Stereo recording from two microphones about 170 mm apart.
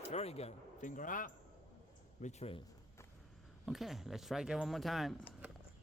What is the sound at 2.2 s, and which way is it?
Speech, 35° left (ahead or behind).